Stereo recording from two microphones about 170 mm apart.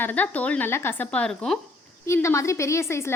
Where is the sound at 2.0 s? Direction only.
15° left (ahead or behind).